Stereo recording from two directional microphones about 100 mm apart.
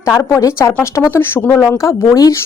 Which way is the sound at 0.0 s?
30° left (ahead or behind).